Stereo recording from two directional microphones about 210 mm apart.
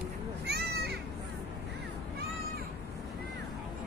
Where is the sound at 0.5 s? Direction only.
50° right (ahead or behind).